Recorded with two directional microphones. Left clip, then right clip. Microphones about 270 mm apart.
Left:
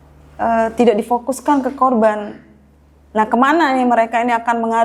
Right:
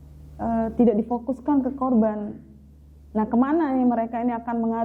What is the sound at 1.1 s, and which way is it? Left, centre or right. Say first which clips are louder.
Speech: left 10 dB; left.